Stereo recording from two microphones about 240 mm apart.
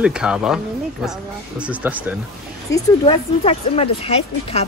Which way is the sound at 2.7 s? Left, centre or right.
Centre.